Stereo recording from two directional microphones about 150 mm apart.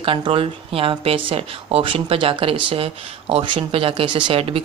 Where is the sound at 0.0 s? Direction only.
35° right (ahead or behind).